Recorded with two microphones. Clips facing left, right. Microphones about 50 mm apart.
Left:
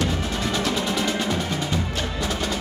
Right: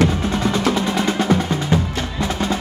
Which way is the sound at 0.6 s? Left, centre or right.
Right.